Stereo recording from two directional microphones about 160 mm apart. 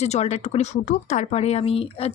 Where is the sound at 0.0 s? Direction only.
45° left (ahead or behind).